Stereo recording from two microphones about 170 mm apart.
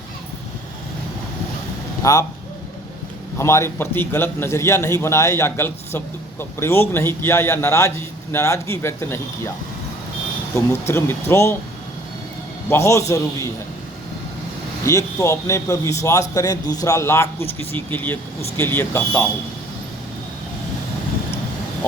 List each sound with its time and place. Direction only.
2.0 s speech: 20° left (ahead or behind)
3.3 s a man's voice: 15° left (ahead or behind)
10.5 s a man's voice: 15° left (ahead or behind)
12.6 s a man's voice: 15° left (ahead or behind)
14.8 s a man's voice: 15° left (ahead or behind)